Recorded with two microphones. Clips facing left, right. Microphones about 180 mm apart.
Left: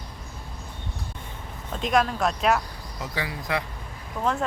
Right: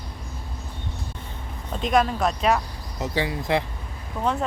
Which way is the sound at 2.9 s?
25° right (ahead or behind).